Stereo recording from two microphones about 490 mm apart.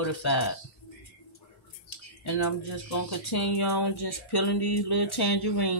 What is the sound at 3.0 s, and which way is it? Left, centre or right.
Speech, left.